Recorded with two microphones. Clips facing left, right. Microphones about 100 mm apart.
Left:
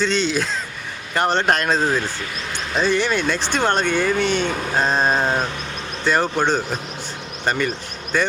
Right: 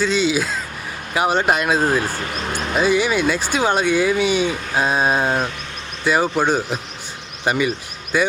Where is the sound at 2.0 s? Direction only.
45° right (ahead or behind).